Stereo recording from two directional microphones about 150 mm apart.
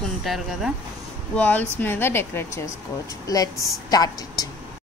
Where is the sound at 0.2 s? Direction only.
Centre (ahead or behind).